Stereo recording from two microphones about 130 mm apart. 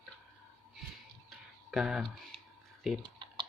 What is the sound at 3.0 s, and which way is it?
Clicking, 35° right (ahead or behind).